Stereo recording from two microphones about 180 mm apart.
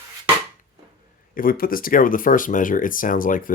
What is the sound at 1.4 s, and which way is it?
Speech, 50° left (ahead or behind).